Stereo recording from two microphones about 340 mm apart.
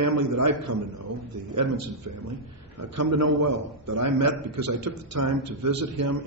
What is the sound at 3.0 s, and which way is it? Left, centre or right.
Speech, right.